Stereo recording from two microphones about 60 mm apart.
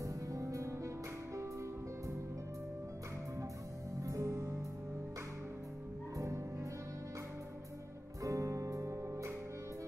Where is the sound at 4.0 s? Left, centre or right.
Right.